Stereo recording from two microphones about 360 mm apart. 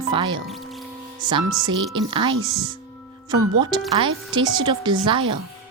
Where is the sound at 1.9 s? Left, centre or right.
Centre.